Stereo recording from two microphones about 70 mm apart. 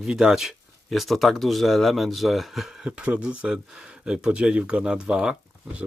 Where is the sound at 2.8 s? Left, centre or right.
Centre.